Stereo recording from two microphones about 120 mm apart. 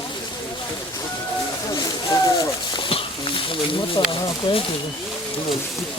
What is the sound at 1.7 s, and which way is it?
Speech, 35° left (ahead or behind).